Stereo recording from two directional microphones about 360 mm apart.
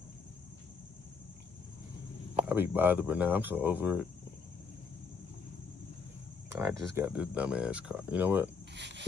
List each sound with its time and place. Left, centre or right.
2.4 s speech: centre
6.5 s speech: centre
8.7 s a sound: right